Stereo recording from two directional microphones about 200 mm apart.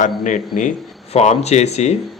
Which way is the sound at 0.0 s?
40° left (ahead or behind).